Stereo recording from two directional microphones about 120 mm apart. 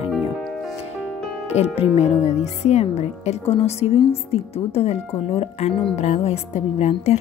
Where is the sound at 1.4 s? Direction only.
60° left (ahead or behind).